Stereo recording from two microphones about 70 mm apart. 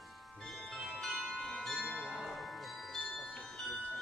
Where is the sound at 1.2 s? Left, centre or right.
Centre.